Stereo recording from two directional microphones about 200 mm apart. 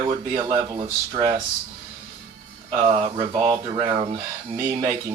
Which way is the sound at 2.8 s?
30° right (ahead or behind).